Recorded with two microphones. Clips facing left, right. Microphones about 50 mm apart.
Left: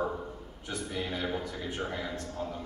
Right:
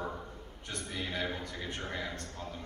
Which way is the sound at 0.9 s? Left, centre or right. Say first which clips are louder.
Left 2 dB; left.